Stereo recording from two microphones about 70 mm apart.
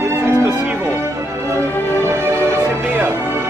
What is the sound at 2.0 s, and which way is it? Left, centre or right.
Music, right.